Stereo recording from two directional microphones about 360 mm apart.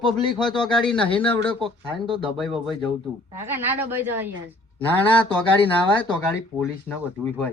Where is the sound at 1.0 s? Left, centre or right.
Centre.